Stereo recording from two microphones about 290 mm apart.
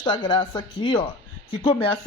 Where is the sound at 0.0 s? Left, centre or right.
Centre.